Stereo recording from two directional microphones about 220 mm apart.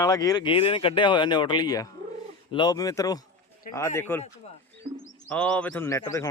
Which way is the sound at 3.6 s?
40° left (ahead or behind).